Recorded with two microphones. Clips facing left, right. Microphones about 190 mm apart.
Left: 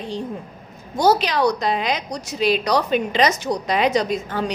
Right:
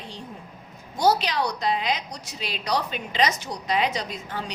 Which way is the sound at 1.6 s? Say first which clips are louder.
Left 3 dB; 80° left.